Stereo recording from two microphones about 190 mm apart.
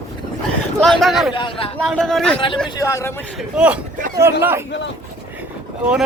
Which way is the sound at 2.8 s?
15° left (ahead or behind).